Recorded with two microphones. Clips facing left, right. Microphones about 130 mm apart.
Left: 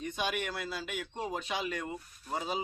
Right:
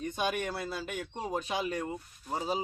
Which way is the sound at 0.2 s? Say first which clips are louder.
Right 2 dB; 45° right (ahead or behind).